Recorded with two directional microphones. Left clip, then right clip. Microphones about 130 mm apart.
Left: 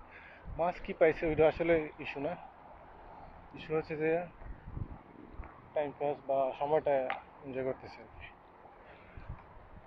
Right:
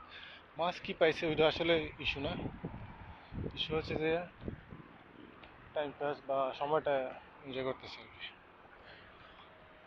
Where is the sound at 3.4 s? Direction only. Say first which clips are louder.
Left 1 dB; 10° left (ahead or behind).